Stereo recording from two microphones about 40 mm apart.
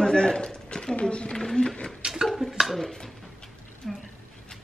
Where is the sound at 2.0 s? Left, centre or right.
Centre.